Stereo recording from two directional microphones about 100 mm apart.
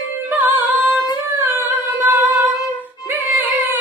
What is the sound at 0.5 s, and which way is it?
Singing, 15° right (ahead or behind).